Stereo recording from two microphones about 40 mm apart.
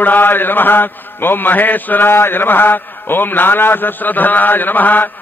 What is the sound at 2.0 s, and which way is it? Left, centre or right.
A man's voice, left.